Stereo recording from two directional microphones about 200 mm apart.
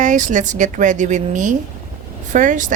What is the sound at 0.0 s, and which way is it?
A woman's voice, 40° right (ahead or behind).